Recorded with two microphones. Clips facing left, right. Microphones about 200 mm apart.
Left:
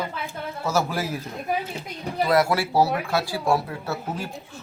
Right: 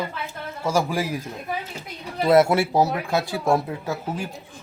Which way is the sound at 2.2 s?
25° right (ahead or behind).